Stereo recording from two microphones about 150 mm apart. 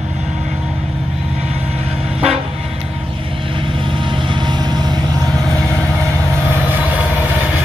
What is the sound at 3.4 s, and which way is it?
Vehicle, 35° right (ahead or behind).